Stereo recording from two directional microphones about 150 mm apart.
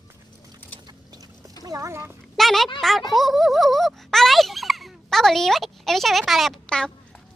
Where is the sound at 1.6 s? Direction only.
20° right (ahead or behind).